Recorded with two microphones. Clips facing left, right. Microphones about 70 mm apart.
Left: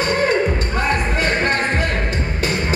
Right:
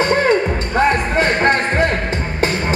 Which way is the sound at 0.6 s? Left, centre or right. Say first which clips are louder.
Right 4 dB; right.